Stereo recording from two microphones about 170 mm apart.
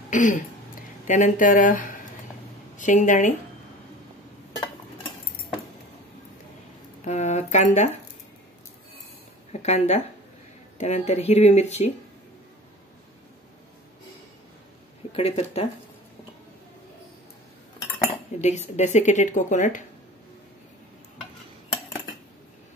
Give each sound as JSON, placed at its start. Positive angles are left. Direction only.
{"t": 0.1, "sound": "a woman's voice", "side_deg": 50}
{"t": 7.1, "sound": "speech", "side_deg": 40}
{"t": 9.5, "sound": "speech", "side_deg": 40}
{"t": 15.1, "sound": "speech", "side_deg": 35}
{"t": 18.4, "sound": "a woman's voice", "side_deg": 40}